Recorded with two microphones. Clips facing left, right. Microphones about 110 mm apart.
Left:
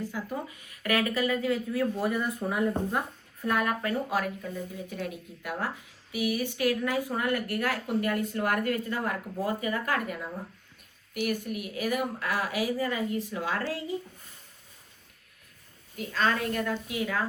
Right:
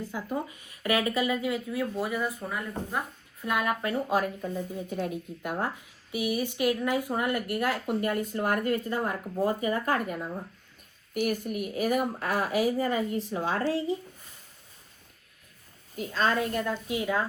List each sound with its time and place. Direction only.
0.1 s speech: 20° right (ahead or behind); by 3.0 s 5° left (ahead or behind)
3.4 s speech: 15° right (ahead or behind)
4.4 s speech: 30° right (ahead or behind)
6.1 s speech: 25° right (ahead or behind)
11.1 s speech: 45° right (ahead or behind)
16.0 s speech: 30° right (ahead or behind)